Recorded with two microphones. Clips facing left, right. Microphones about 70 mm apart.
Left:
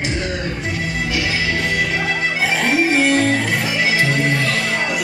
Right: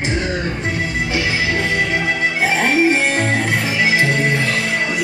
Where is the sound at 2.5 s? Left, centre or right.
Right.